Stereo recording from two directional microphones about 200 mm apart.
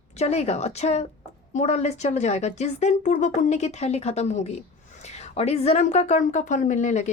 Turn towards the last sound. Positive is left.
turn(degrees=35)  # may be behind; listen again after turning